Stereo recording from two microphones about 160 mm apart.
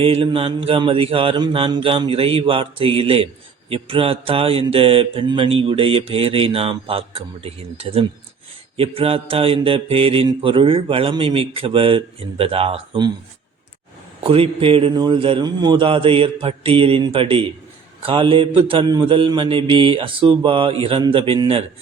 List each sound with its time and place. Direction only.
0.0 s mantra: 35° right (ahead or behind)
14.3 s mantra: 35° right (ahead or behind)